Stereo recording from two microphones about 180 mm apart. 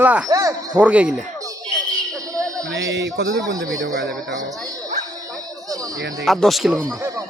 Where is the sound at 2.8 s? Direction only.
80° right.